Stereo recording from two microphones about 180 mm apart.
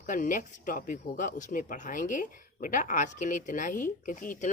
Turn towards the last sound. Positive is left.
turn(degrees=45)  # may be behind; listen again after turning